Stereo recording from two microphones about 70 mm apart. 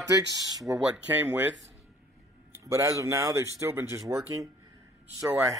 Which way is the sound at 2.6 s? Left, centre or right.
Right.